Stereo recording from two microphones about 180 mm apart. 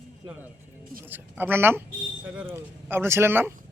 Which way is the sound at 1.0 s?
10° right (ahead or behind).